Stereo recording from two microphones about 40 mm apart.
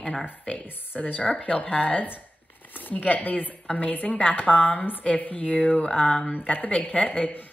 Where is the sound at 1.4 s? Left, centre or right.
Left.